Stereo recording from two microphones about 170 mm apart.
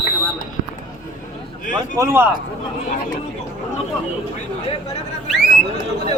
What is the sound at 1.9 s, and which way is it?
Speech, 15° right (ahead or behind).